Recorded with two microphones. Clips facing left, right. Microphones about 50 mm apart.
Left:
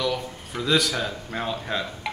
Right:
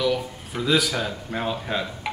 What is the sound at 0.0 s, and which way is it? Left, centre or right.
Speech, centre.